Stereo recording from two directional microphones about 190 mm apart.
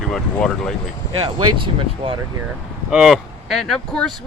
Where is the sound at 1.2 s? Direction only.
25° right (ahead or behind).